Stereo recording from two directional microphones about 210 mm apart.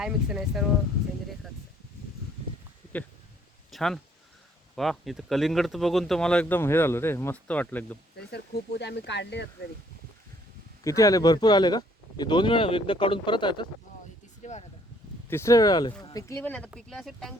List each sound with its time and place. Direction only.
0.0 s speech: centre (ahead or behind)
3.7 s a sound: centre (ahead or behind)
4.7 s speech: centre (ahead or behind)
8.2 s speech: 50° left (ahead or behind)
10.8 s speech: 15° left (ahead or behind)
14.4 s a sound: 35° left (ahead or behind)
15.3 s speech: 15° left (ahead or behind)